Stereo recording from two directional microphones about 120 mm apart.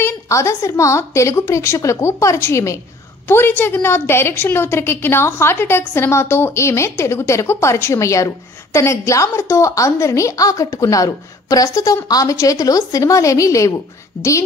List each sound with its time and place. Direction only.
0.0 s a woman's voice: 25° left (ahead or behind)